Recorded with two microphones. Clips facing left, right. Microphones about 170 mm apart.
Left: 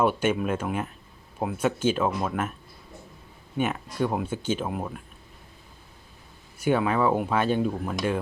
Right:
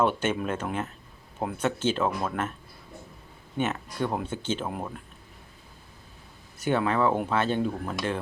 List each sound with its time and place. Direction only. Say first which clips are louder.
0.0 s speech: left 2 dB; 10° left (ahead or behind)
3.6 s speech: left 2 dB; 10° left (ahead or behind)
6.6 s speech: left 2 dB; 10° left (ahead or behind)